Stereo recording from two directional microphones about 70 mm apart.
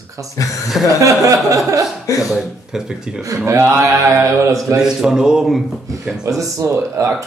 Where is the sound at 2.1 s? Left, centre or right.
Left.